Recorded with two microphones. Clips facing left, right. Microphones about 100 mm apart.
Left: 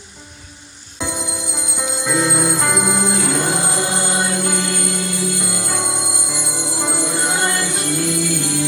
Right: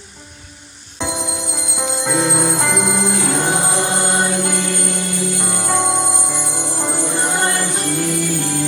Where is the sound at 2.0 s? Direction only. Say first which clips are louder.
Even; 50° right (ahead or behind).